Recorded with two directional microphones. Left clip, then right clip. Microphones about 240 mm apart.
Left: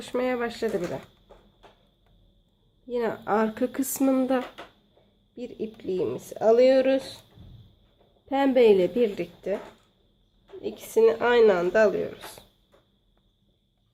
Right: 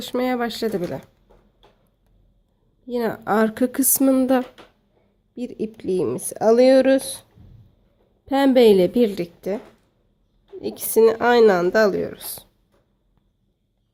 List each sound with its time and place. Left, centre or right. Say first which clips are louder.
0.0 s speech: right 4 dB; right
2.8 s speech: right 4 dB; right
5.3 s speech: right 5 dB; right
8.3 s speech: right 5 dB; right
10.6 s speech: right 5 dB; right